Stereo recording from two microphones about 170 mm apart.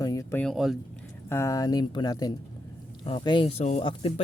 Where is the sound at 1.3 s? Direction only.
15° left (ahead or behind); by 4.2 s 35° left (ahead or behind).